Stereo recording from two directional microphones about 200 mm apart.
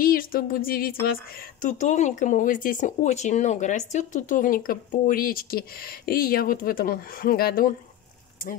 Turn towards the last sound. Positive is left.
turn(degrees=45)  # may be behind; listen again after turning